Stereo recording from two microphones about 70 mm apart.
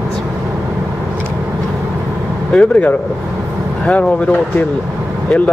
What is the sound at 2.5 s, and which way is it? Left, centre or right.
Speech, centre.